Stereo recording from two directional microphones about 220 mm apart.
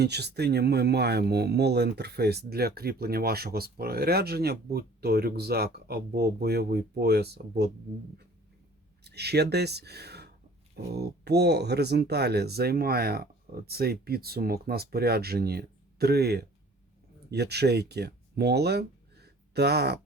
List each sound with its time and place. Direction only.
0.0 s speech: 50° right (ahead or behind)
9.0 s speech: 50° right (ahead or behind)